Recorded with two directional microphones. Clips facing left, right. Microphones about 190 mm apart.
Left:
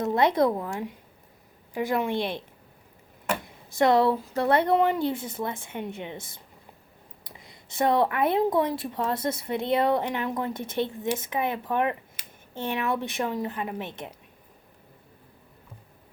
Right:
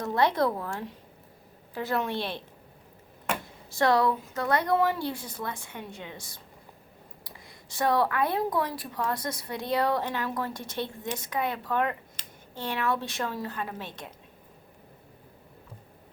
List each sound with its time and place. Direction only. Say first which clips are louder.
0.0 s a woman's voice: left 3 dB; 20° left (ahead or behind)
3.4 s speech: left 3 dB; 20° left (ahead or behind)